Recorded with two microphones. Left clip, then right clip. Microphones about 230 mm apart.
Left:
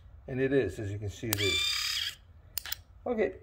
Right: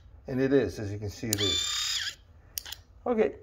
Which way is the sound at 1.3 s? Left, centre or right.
Right.